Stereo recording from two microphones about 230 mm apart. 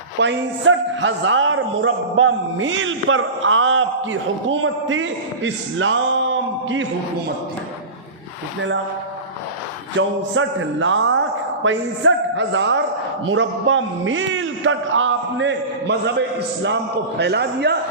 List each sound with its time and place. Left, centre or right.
0.2 s a man's voice: right
10.0 s a man's voice: right
17.2 s a man's voice: right